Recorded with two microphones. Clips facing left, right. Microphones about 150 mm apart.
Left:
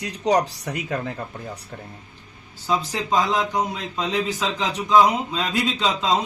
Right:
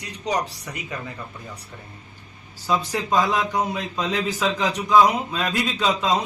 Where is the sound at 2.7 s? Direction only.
20° left (ahead or behind).